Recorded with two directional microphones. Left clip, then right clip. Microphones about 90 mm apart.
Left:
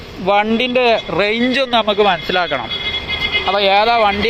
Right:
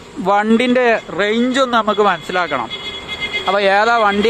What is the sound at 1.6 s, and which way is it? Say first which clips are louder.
Speech: even; 50° right (ahead or behind).